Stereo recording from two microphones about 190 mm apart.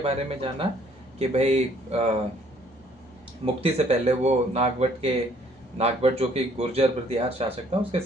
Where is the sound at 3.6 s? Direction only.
30° right (ahead or behind).